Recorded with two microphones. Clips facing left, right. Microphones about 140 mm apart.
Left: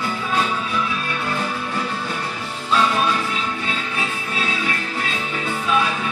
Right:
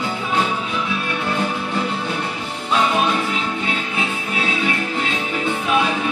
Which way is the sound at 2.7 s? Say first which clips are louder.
Right 1 dB; 20° right (ahead or behind).